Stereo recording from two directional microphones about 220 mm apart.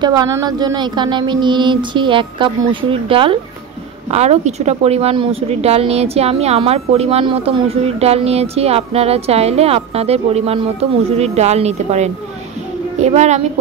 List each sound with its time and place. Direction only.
0.0 s a woman's voice: 15° right (ahead or behind)